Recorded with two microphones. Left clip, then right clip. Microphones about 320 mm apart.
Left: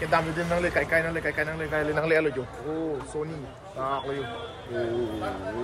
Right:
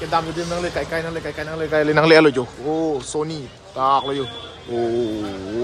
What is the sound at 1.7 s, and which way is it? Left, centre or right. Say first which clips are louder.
Speech: right 12 dB; right.